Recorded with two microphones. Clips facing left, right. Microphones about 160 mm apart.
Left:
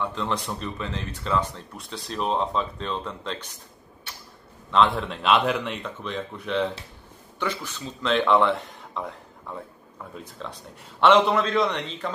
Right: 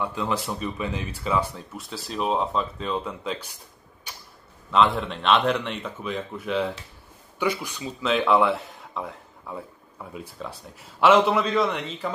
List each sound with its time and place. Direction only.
0.0 s speech: 10° right (ahead or behind)
4.6 s speech: centre (ahead or behind)